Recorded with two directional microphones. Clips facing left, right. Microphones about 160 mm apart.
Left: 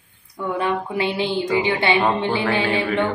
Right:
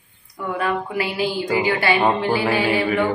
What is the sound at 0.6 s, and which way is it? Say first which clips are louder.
Speech: even; 25° left (ahead or behind).